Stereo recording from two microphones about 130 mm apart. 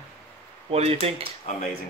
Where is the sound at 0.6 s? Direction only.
50° right (ahead or behind).